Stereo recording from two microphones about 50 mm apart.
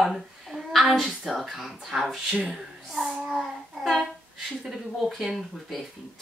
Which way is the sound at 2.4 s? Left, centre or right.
Centre.